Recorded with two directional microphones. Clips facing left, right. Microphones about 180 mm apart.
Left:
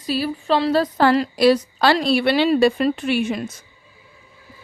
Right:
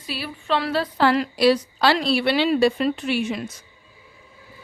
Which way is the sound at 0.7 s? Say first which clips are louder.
Left 2 dB; 45° left (ahead or behind).